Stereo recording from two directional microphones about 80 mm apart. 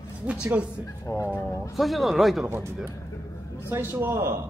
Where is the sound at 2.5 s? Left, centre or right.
Right.